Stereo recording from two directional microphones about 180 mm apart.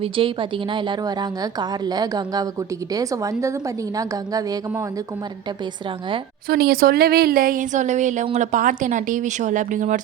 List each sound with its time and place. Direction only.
0.0 s a woman's voice: 30° right (ahead or behind)
6.5 s speech: 55° right (ahead or behind)